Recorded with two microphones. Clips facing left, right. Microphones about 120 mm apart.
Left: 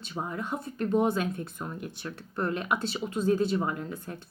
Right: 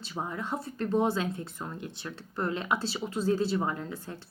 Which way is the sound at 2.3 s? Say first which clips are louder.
Left 1 dB; 25° right (ahead or behind).